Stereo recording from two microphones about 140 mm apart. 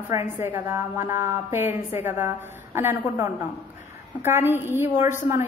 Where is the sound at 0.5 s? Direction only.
20° right (ahead or behind).